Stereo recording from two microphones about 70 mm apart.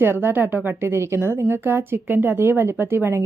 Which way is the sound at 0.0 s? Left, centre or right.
Right.